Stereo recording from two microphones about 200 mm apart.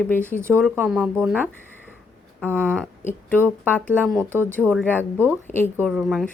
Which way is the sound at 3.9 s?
10° right (ahead or behind).